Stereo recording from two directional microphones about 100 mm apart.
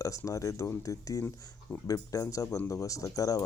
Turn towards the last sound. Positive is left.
turn(degrees=35)  # may be behind; listen again after turning